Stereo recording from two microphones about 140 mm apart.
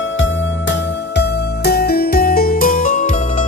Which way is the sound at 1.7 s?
90° left.